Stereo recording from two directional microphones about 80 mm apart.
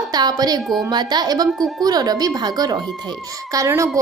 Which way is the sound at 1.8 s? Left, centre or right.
Right.